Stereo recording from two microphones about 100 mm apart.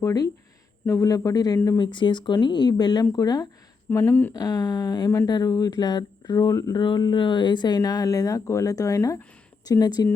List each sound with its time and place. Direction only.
0.0 s speech: 35° left (ahead or behind)
1.8 s speech: 55° left (ahead or behind)
3.8 s speech: 20° left (ahead or behind)
4.4 s speech: 40° left (ahead or behind)
6.8 s speech: 50° left (ahead or behind)